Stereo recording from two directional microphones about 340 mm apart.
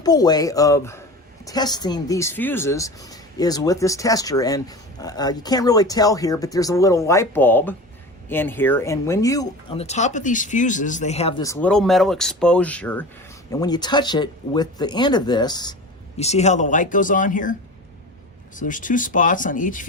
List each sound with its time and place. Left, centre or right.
0.0 s speech: centre
18.5 s speech: left